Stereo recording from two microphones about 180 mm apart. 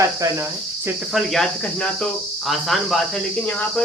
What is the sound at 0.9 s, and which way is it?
Cricket, centre (ahead or behind).